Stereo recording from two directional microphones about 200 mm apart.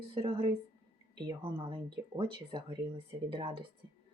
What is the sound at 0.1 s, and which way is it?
Speech, 25° right (ahead or behind).